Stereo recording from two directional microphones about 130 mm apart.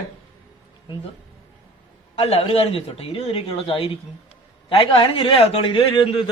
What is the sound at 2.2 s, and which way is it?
Speech, 50° left (ahead or behind).